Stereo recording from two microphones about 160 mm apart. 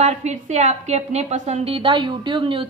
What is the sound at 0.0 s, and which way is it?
A woman's voice, 45° right (ahead or behind).